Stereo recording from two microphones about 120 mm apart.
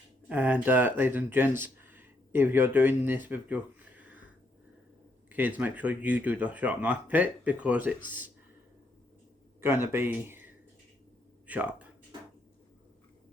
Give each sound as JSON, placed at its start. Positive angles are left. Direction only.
{"t": 0.3, "sound": "speech", "side_deg": -15}
{"t": 5.3, "sound": "speech", "side_deg": -15}
{"t": 9.6, "sound": "speech", "side_deg": -20}